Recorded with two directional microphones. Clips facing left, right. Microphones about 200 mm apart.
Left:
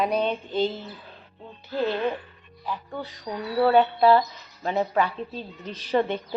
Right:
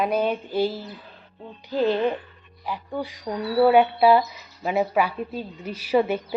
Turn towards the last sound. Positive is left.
turn(degrees=-10)  # may be behind; listen again after turning